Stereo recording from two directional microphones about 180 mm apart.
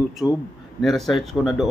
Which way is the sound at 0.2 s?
Centre (ahead or behind).